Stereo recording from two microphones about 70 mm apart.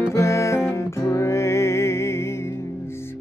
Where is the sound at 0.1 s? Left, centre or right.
Left.